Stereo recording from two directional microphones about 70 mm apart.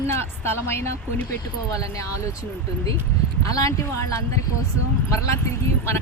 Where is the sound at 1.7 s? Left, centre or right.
Left.